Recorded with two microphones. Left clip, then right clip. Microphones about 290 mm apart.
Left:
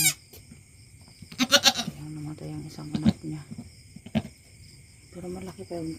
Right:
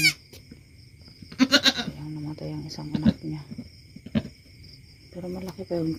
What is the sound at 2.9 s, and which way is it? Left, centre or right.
Goat, centre.